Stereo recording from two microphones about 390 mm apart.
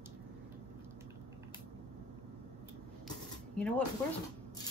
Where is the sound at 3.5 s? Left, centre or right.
Centre.